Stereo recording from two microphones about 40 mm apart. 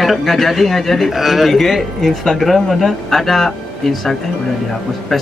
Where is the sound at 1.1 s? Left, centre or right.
Centre.